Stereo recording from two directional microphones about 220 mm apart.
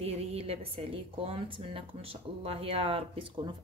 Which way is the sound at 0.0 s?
25° right (ahead or behind).